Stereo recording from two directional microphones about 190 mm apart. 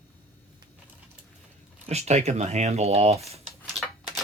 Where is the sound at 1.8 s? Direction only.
35° right (ahead or behind).